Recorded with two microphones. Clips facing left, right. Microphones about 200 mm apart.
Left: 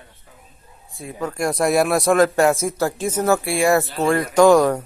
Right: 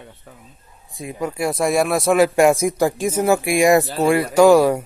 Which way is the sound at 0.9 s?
15° right (ahead or behind).